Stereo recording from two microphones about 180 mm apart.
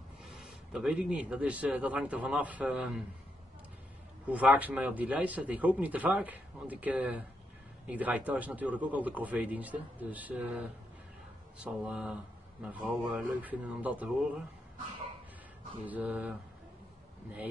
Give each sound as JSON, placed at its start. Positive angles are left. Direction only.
{"t": 0.3, "sound": "speech", "side_deg": 0}
{"t": 4.3, "sound": "speech", "side_deg": -10}
{"t": 11.6, "sound": "speech", "side_deg": -5}
{"t": 15.8, "sound": "speech", "side_deg": -10}